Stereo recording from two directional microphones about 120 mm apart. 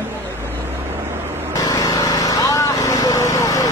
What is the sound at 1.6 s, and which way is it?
Lawn mower, 30° left (ahead or behind).